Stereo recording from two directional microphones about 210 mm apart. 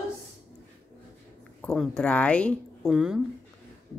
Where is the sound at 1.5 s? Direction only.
Centre (ahead or behind).